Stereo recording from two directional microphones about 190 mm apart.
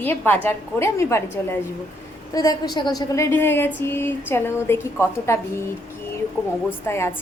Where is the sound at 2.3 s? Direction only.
20° left (ahead or behind).